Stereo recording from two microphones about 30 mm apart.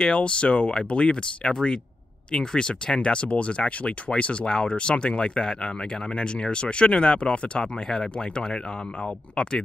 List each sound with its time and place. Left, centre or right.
0.1 s speech: left
9.3 s speech: left